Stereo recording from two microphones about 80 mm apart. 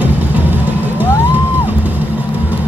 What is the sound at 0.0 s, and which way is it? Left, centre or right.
Vehicle, right.